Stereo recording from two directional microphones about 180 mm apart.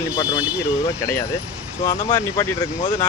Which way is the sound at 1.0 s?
15° left (ahead or behind).